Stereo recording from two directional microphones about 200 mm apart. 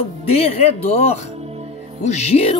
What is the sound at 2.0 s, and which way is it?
Speech, 35° left (ahead or behind).